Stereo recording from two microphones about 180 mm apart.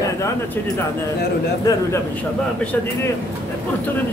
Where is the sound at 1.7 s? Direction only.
20° left (ahead or behind).